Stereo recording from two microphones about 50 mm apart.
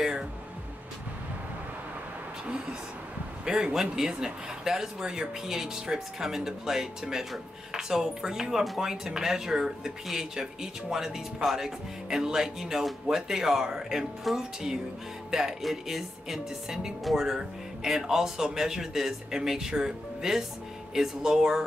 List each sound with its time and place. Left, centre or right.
0.0 s music: centre
3.4 s speech: centre